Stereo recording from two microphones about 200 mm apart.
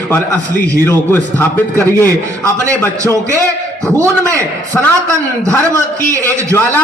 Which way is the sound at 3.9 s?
15° right (ahead or behind).